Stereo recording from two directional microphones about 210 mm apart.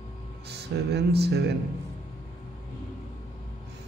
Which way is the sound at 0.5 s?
50° right (ahead or behind).